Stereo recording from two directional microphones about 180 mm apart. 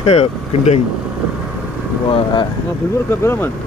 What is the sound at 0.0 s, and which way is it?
Speech, 35° left (ahead or behind).